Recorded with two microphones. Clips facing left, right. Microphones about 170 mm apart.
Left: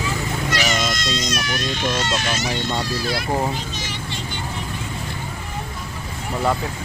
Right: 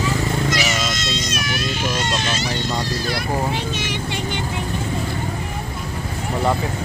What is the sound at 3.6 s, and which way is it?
Vehicle, 65° right (ahead or behind).